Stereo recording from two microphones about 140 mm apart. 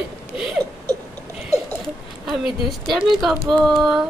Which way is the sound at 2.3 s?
Centre (ahead or behind).